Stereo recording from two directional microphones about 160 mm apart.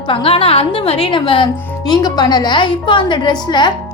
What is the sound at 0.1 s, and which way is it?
A woman's voice, 35° left (ahead or behind).